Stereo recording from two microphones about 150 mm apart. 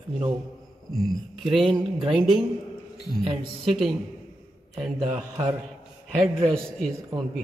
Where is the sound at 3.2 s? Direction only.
35° right (ahead or behind).